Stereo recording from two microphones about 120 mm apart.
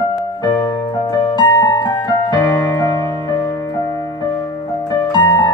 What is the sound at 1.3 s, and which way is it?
Music, 35° left (ahead or behind).